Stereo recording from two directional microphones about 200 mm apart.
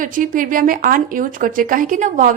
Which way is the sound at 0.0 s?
45° right (ahead or behind).